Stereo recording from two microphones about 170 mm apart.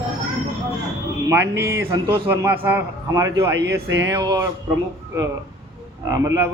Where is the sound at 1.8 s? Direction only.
15° right (ahead or behind).